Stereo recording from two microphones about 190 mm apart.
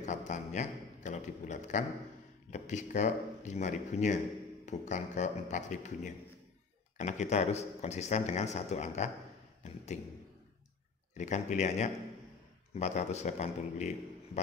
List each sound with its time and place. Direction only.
0.0 s a sound: 40° left (ahead or behind)
2.5 s a man's voice: 40° left (ahead or behind)
11.1 s a man's voice: 40° left (ahead or behind)